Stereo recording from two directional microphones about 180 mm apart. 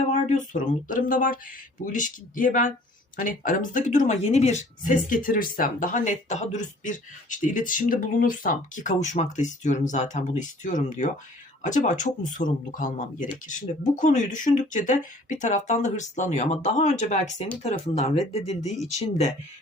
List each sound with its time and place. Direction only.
0.1 s speech: 40° left (ahead or behind)